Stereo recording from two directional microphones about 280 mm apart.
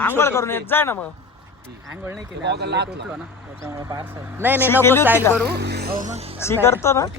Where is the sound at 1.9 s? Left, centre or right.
Centre.